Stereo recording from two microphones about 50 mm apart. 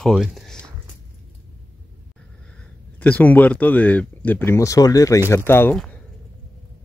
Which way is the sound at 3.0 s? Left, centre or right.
Left.